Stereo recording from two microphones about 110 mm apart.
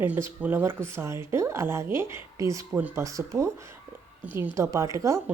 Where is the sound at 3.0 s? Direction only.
30° right (ahead or behind).